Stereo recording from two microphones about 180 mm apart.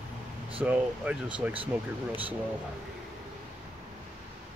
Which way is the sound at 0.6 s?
5° right (ahead or behind).